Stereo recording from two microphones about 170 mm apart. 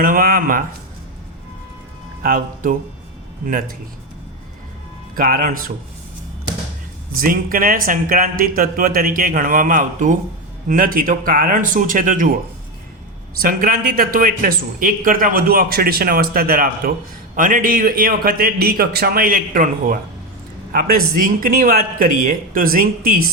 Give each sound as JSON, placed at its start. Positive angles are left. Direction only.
{"t": 0.0, "sound": "speech", "side_deg": -60}
{"t": 2.2, "sound": "speech", "side_deg": -55}
{"t": 5.1, "sound": "speech", "side_deg": -55}
{"t": 7.2, "sound": "speech", "side_deg": -55}
{"t": 13.4, "sound": "speech", "side_deg": -60}